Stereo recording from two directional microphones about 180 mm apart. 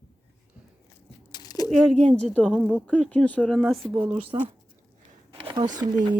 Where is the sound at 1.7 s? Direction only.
5° left (ahead or behind).